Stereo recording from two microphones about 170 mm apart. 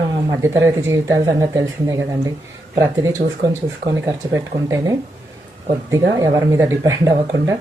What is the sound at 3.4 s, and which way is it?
Speech, 20° right (ahead or behind).